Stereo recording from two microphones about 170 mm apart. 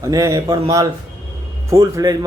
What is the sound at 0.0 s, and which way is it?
A man's voice, 20° right (ahead or behind).